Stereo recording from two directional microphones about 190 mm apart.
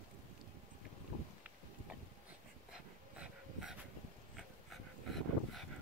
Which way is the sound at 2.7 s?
5° right (ahead or behind).